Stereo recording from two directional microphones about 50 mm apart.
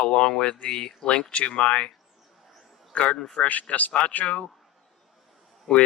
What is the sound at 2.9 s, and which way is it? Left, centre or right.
Speech, left.